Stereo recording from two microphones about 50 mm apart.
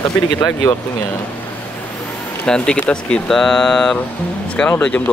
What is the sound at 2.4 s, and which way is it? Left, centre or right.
Speech, centre.